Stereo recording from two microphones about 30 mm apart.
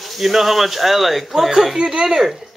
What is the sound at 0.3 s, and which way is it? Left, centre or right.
A man's voice, centre.